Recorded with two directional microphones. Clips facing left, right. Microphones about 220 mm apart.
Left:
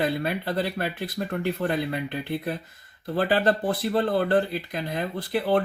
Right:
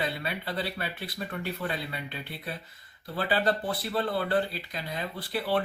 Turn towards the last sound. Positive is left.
turn(degrees=45)  # may be behind; listen again after turning